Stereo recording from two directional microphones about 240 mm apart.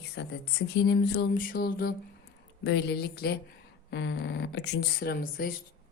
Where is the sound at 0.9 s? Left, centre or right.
Left.